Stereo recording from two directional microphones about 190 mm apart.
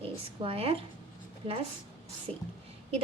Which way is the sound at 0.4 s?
30° right (ahead or behind).